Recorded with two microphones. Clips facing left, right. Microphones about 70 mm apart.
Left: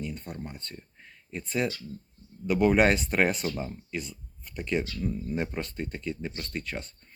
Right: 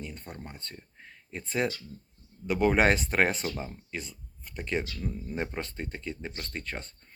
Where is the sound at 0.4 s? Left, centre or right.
Right.